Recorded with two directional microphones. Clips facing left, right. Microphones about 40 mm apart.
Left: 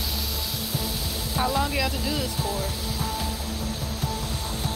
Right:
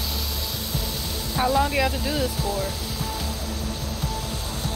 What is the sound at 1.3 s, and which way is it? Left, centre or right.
Speech, centre.